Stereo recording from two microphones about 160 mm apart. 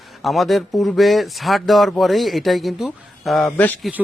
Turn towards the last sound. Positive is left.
turn(degrees=10)  # may be behind; listen again after turning